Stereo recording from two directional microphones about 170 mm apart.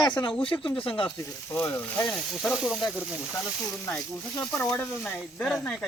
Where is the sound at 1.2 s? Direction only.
15° left (ahead or behind).